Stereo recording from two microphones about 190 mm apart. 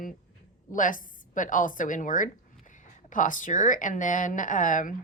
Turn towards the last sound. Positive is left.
turn(degrees=45)  # may be behind; listen again after turning